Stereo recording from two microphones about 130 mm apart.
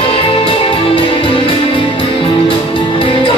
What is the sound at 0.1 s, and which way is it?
Music, 45° left (ahead or behind).